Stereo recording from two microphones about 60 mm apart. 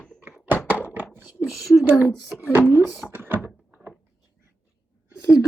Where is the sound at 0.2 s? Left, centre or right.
Right.